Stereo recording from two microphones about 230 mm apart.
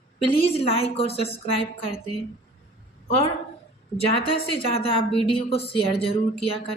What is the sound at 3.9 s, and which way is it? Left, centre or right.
A woman's voice, left.